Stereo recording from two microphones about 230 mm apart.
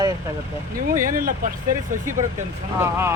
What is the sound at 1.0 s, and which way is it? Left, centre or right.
Speech, right.